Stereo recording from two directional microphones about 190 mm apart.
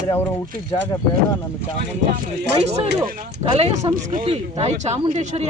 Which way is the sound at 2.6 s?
35° right (ahead or behind).